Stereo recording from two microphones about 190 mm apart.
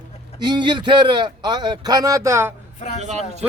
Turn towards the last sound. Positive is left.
turn(degrees=-35)  # may be behind; listen again after turning